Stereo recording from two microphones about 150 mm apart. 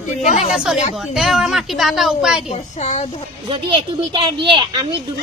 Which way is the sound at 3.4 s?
35° right (ahead or behind).